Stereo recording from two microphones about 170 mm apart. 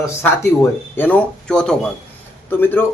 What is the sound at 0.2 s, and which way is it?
A man's voice, 10° left (ahead or behind).